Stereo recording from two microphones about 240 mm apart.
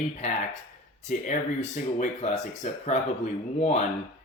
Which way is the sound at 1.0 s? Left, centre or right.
Left.